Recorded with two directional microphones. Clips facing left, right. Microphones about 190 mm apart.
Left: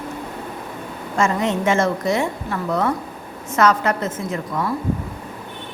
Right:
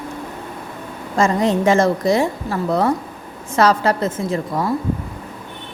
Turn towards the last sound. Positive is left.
turn(degrees=-30)  # may be behind; listen again after turning